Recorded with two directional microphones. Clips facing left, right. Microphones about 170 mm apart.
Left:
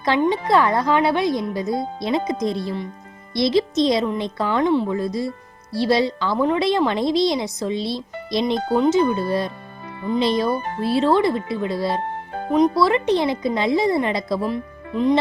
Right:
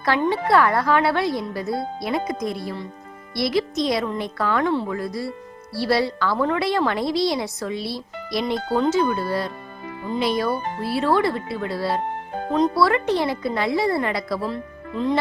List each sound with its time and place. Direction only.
0.0 s a woman's voice: 20° left (ahead or behind)